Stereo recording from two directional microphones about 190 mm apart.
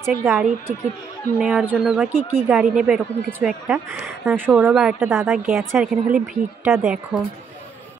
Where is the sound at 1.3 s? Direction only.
5° right (ahead or behind).